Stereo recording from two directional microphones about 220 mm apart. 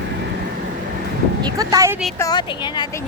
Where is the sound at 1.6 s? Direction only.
15° right (ahead or behind).